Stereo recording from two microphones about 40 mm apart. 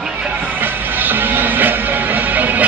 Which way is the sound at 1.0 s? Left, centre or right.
Right.